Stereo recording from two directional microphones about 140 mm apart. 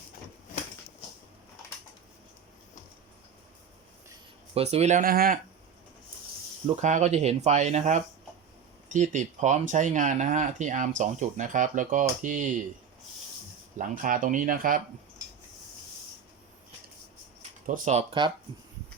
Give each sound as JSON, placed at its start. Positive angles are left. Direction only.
{"t": 4.5, "sound": "speech", "side_deg": -50}
{"t": 5.0, "sound": "speech", "side_deg": -90}
{"t": 6.8, "sound": "speech", "side_deg": -55}
{"t": 13.7, "sound": "speech", "side_deg": -70}
{"t": 17.7, "sound": "speech", "side_deg": -70}
{"t": 18.2, "sound": "speech", "side_deg": -35}